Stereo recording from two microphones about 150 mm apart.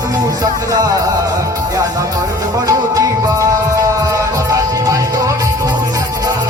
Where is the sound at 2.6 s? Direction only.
20° right (ahead or behind).